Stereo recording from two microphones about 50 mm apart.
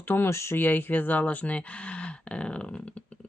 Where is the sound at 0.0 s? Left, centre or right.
Left.